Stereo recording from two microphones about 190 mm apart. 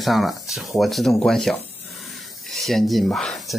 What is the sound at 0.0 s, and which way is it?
Speech, centre (ahead or behind).